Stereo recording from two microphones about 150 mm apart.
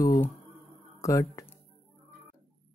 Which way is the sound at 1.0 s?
20° left (ahead or behind).